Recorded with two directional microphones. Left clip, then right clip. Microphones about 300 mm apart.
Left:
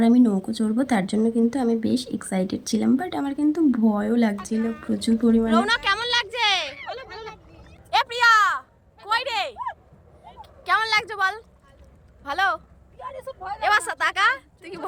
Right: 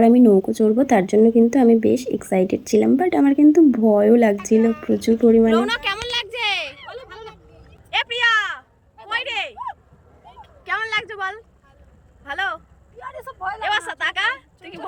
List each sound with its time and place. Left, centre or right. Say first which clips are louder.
0.1 s speech: right 7 dB; left
5.5 s a sound: right 1 dB; centre
7.9 s a sound: left 1 dB; centre
12.2 s speech: left 2 dB; centre
13.1 s vehicle: right 5 dB; centre
13.6 s a woman's voice: left 3 dB; centre